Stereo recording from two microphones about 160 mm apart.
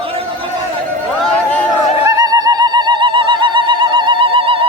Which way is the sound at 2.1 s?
25° right (ahead or behind).